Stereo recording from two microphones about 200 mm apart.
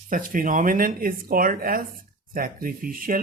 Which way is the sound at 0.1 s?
45° right (ahead or behind).